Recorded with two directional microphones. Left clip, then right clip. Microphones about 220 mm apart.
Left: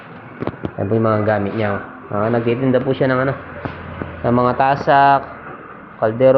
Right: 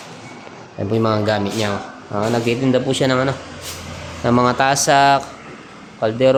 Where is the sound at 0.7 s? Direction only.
20° right (ahead or behind); by 5.3 s 35° right (ahead or behind).